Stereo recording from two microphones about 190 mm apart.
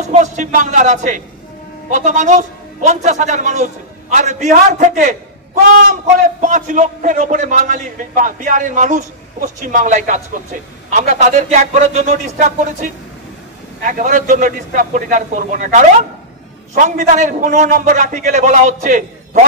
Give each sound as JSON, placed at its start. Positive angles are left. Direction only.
{"t": 0.0, "sound": "a man's voice", "side_deg": -40}